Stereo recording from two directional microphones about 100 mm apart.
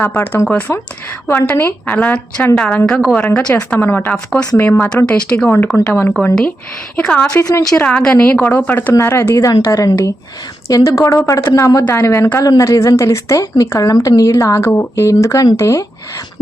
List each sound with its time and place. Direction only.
0.0 s a woman's voice: 20° left (ahead or behind)
3.2 s a woman's voice: 20° left (ahead or behind)
5.7 s speech: 25° left (ahead or behind)
6.9 s a woman's voice: 10° left (ahead or behind)
7.3 s speech: 30° left (ahead or behind)
7.8 s a woman's voice: 10° left (ahead or behind); by 15.9 s 30° left (ahead or behind)